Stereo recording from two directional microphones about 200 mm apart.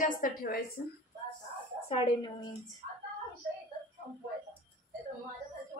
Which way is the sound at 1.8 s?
30° left (ahead or behind).